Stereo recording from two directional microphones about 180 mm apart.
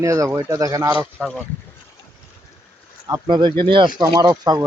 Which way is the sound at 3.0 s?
20° right (ahead or behind).